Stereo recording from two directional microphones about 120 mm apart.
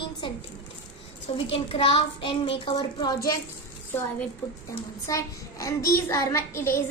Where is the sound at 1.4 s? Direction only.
50° left (ahead or behind).